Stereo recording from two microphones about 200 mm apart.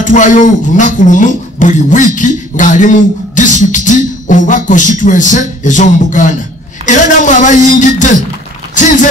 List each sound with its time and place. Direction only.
0.0 s a man's voice: 40° left (ahead or behind)